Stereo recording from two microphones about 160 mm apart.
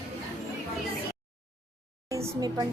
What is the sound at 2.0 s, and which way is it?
Speech, 20° right (ahead or behind).